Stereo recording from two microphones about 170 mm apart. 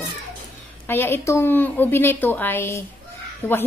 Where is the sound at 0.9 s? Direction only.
15° left (ahead or behind).